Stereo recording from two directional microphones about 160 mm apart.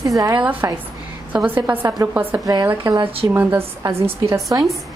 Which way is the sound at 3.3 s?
15° right (ahead or behind).